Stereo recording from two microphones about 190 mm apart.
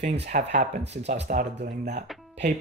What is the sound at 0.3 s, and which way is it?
Speech, 40° right (ahead or behind).